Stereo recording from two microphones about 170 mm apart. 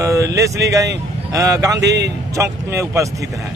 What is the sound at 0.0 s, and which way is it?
Speech, 20° right (ahead or behind).